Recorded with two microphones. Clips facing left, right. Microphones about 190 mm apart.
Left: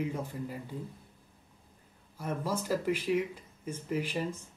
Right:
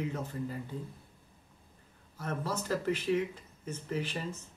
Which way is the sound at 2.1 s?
10° left (ahead or behind).